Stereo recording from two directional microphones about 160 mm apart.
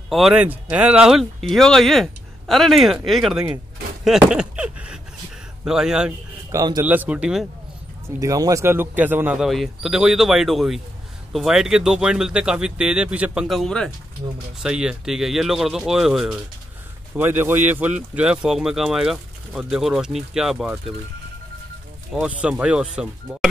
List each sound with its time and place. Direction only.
0.1 s speech: 5° right (ahead or behind)
4.0 s a sound: 5° right (ahead or behind)
5.7 s speech: 5° right (ahead or behind)
6.5 s a man's voice: 25° right (ahead or behind)
6.8 s speech: 10° right (ahead or behind)
8.2 s speech: 20° right (ahead or behind); by 20.7 s 5° right (ahead or behind)
22.1 s speech: 5° right (ahead or behind)